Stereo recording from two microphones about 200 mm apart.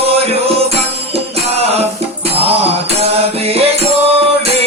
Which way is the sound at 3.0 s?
30° right (ahead or behind).